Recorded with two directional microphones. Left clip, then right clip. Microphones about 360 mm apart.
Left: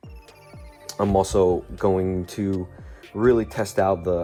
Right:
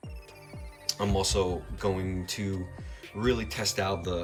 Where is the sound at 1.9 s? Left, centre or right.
Left.